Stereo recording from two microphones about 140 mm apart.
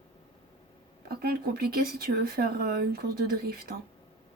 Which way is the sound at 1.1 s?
90° right.